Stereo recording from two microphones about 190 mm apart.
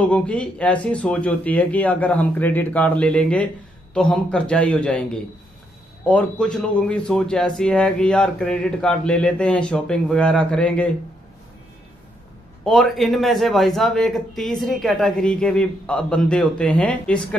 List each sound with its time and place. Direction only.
0.0 s speech: 5° left (ahead or behind)
12.6 s speech: centre (ahead or behind)